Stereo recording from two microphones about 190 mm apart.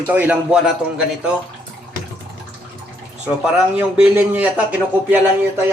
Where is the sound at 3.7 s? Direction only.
10° right (ahead or behind).